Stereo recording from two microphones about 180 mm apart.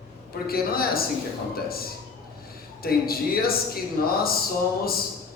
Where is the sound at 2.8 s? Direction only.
55° left (ahead or behind).